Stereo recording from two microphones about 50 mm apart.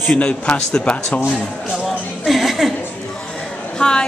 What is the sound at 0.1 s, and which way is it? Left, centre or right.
Speech, left.